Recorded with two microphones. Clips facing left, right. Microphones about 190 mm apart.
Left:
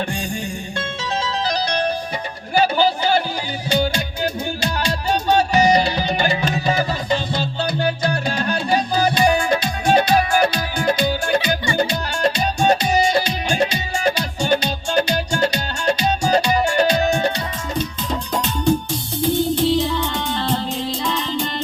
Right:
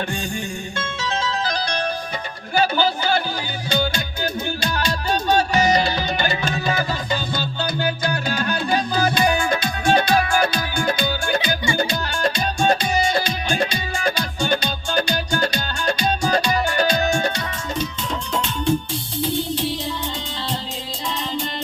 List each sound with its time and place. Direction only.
0.8 s music: 35° left (ahead or behind)
2.6 s a sound: 35° left (ahead or behind)
3.7 s music: 35° left (ahead or behind)
19.8 s music: 60° left (ahead or behind)